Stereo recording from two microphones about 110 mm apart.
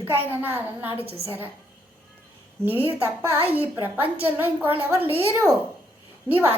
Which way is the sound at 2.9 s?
15° right (ahead or behind).